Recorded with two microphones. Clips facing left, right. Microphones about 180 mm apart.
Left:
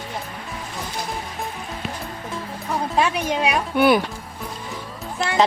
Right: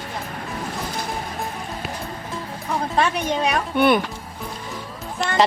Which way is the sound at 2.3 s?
Centre (ahead or behind).